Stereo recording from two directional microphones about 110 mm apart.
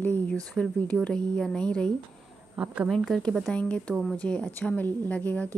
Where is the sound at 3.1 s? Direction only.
5° left (ahead or behind).